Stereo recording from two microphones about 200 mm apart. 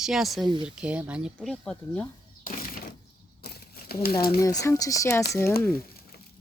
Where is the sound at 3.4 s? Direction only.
55° left (ahead or behind).